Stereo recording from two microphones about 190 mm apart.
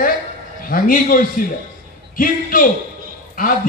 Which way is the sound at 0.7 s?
45° left (ahead or behind).